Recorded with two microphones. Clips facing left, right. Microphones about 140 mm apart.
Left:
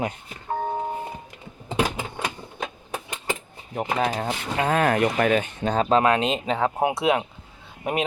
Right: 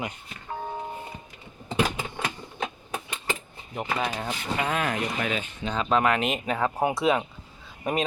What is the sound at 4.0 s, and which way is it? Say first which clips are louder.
Speech: left 5 dB; 35° left (ahead or behind).